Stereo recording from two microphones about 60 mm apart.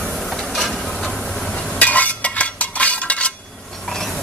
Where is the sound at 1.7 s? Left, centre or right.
Left.